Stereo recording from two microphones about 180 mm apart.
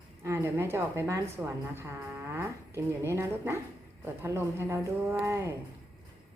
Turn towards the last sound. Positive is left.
turn(degrees=-15)  # may be behind; listen again after turning